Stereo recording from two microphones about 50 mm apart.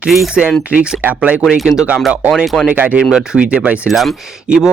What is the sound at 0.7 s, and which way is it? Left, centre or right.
Speech, right.